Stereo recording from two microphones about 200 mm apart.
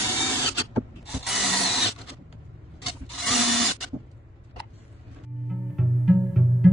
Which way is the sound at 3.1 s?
Centre (ahead or behind).